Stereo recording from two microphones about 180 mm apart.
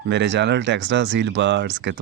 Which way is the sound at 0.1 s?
80° right.